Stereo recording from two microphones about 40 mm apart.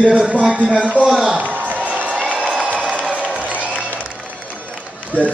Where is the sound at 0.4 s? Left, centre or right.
Right.